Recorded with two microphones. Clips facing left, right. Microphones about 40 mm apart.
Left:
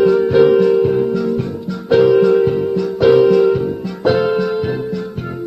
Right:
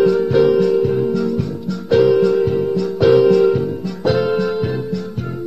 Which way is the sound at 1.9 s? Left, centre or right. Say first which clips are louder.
Left 2 dB; centre.